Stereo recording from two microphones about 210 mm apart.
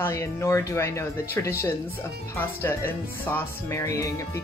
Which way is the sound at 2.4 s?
10° left (ahead or behind).